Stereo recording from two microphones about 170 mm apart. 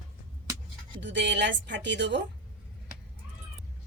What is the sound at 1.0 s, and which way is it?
Speech, 90° right.